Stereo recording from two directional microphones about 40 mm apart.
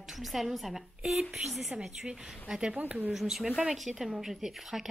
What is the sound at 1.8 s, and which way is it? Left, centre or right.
Speech, centre.